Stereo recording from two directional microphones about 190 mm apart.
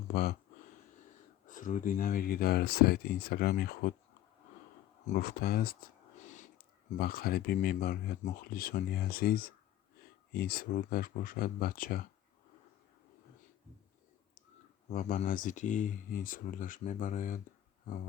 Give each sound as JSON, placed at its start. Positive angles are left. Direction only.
{"t": 0.1, "sound": "speech", "side_deg": 60}
{"t": 1.5, "sound": "speech", "side_deg": 45}
{"t": 5.0, "sound": "speech", "side_deg": 45}
{"t": 6.9, "sound": "speech", "side_deg": 55}
{"t": 14.8, "sound": "speech", "side_deg": 40}